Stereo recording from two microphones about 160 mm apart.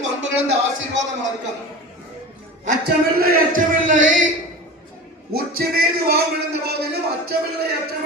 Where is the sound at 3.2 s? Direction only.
65° right (ahead or behind).